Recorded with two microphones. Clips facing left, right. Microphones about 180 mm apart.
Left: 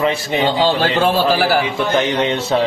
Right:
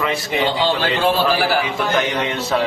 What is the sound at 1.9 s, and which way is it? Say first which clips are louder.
Speech: left 5 dB; 30° left (ahead or behind).